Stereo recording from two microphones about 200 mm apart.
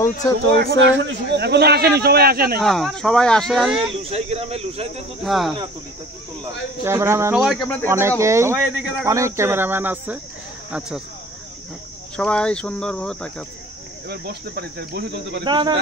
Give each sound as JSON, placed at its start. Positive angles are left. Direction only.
{"t": 0.6, "sound": "speech", "side_deg": -65}
{"t": 2.6, "sound": "speech", "side_deg": 0}
{"t": 4.0, "sound": "speech", "side_deg": -30}
{"t": 5.2, "sound": "speech", "side_deg": 0}
{"t": 6.8, "sound": "speech", "side_deg": -15}
{"t": 8.2, "sound": "speech", "side_deg": -15}
{"t": 12.2, "sound": "speech", "side_deg": 5}
{"t": 14.0, "sound": "speech", "side_deg": -50}
{"t": 15.4, "sound": "speech", "side_deg": -25}